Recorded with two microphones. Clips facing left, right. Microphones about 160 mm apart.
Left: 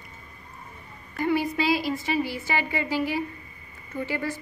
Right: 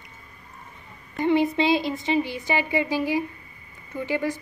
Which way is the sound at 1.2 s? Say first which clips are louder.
Right 4 dB; 20° right (ahead or behind).